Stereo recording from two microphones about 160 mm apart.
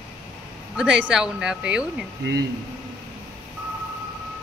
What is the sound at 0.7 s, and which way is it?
Speech, 5° right (ahead or behind).